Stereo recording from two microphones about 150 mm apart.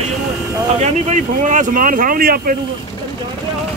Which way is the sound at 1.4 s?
60° right (ahead or behind).